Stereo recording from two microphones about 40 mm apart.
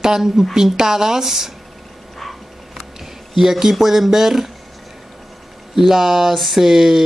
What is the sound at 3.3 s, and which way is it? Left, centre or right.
Speech, centre.